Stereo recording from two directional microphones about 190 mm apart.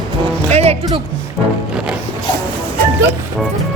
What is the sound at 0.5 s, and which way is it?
Music, 35° right (ahead or behind).